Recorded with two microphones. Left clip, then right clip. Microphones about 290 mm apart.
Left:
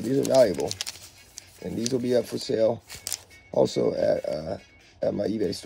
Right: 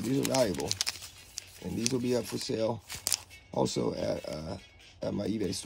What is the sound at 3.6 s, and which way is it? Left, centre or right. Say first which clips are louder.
Speech: left 8 dB; centre.